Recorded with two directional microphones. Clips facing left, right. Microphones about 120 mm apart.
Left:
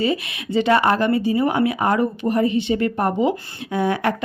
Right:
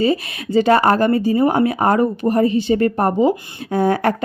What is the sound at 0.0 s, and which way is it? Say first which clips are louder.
Speech: right 4 dB; 40° right (ahead or behind).